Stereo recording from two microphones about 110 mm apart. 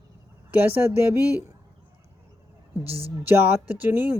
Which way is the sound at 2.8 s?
65° right (ahead or behind).